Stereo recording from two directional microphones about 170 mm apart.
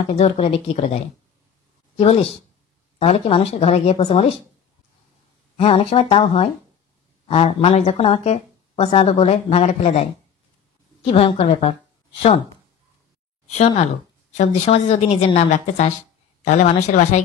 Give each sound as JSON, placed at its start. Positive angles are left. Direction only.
{"t": 0.1, "sound": "speech", "side_deg": 35}
{"t": 5.6, "sound": "speech", "side_deg": 35}
{"t": 13.5, "sound": "speech", "side_deg": 40}